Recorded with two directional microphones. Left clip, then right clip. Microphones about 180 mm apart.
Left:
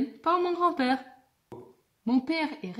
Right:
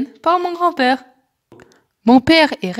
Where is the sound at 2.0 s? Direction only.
40° right (ahead or behind).